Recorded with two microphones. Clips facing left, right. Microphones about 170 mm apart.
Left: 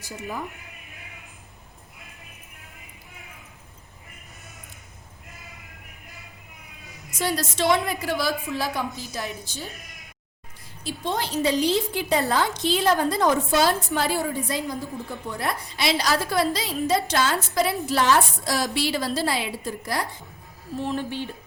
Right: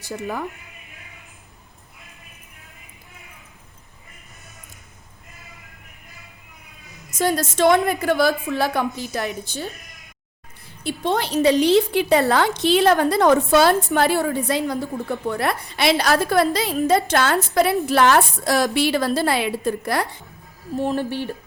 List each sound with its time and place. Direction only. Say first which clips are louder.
0.0 s speech: right 5 dB; 65° right (ahead or behind)
7.2 s a woman's voice: right 6 dB; 45° right (ahead or behind); by 9.7 s 65° right (ahead or behind)
10.8 s a woman's voice: right 5 dB; 65° right (ahead or behind)